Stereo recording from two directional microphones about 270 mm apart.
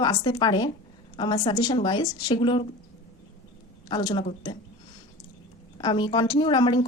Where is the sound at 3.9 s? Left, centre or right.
Centre.